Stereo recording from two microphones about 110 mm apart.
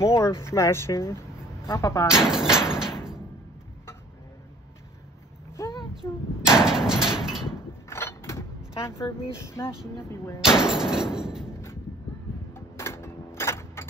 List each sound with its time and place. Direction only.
0.0 s speech: 25° left (ahead or behind)
2.0 s speech: 5° right (ahead or behind)
5.9 s a sound: 5° right (ahead or behind)
7.9 s mechanisms: 25° left (ahead or behind)
10.4 s door: 5° right (ahead or behind)
12.5 s a sound: 25° left (ahead or behind)